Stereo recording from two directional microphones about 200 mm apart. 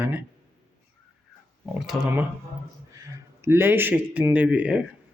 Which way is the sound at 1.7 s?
Centre (ahead or behind).